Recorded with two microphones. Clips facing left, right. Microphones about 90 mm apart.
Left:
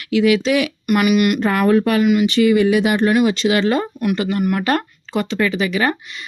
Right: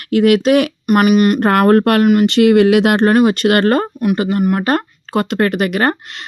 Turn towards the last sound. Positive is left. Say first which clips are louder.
# right 3 dB
turn(degrees=-55)  # may be behind; listen again after turning